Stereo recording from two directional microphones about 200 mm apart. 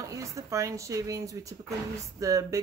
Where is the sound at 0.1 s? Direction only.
15° right (ahead or behind).